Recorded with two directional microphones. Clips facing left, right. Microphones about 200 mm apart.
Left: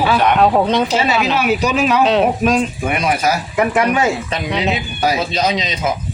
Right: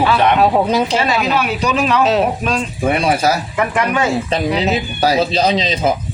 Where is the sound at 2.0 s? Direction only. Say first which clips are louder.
Left 1 dB; centre (ahead or behind).